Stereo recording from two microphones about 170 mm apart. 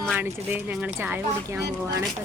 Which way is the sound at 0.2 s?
10° right (ahead or behind).